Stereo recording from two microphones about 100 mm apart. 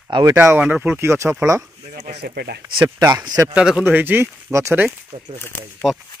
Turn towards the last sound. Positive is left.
turn(degrees=-5)  # may be behind; listen again after turning